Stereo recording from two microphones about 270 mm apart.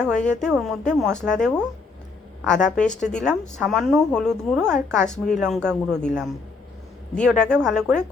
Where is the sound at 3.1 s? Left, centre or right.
Centre.